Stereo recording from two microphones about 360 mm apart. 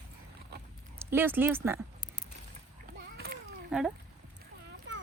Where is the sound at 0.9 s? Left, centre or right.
Centre.